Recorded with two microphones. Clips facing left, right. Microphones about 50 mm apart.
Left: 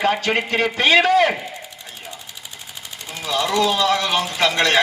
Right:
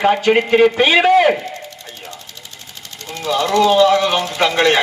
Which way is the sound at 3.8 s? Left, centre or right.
Centre.